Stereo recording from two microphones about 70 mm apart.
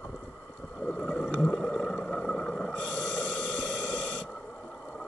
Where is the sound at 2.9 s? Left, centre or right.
Left.